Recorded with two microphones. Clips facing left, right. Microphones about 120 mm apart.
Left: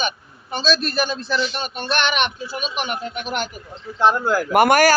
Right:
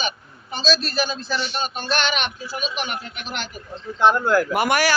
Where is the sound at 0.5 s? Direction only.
55° left (ahead or behind).